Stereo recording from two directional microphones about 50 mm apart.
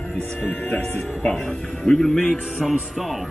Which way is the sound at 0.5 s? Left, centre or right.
Left.